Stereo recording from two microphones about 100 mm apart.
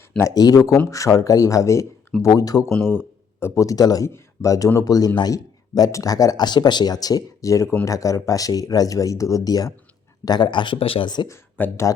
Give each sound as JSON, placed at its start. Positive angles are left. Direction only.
{"t": 0.2, "sound": "a man's voice", "side_deg": 35}
{"t": 10.8, "sound": "speech", "side_deg": 65}
{"t": 11.6, "sound": "speech", "side_deg": 15}